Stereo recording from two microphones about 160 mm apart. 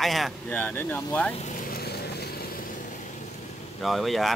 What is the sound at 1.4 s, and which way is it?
Vehicle, 50° left (ahead or behind).